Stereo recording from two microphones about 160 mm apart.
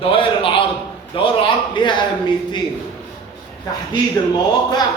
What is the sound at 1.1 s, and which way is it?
Speech, 35° left (ahead or behind).